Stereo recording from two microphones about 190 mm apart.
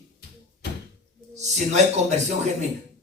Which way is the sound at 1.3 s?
35° right (ahead or behind).